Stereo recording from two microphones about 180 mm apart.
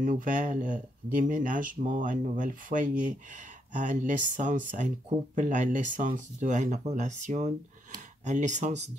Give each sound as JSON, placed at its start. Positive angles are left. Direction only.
{"t": 0.0, "sound": "speech", "side_deg": -45}